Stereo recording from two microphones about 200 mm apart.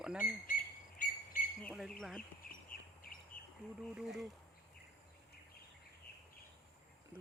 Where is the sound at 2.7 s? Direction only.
45° left (ahead or behind).